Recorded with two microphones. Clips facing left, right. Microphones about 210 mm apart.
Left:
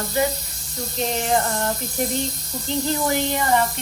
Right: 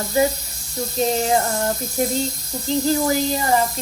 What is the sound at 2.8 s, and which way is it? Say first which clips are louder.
Speech: right 3 dB; 35° right (ahead or behind).